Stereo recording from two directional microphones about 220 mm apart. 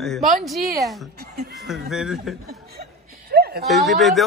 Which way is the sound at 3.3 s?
45° right (ahead or behind).